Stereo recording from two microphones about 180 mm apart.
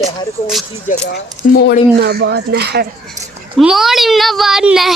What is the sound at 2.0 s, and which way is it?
Speech, 65° right (ahead or behind).